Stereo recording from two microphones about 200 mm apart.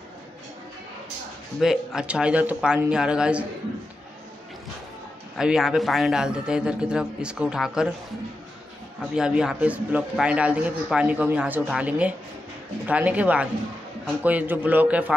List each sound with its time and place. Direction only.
1.6 s a man's voice: 5° right (ahead or behind)
5.4 s a man's voice: 5° right (ahead or behind)
9.1 s a man's voice: 5° right (ahead or behind)